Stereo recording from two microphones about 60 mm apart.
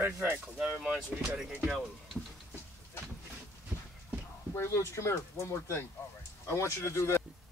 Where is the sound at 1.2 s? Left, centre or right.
Centre.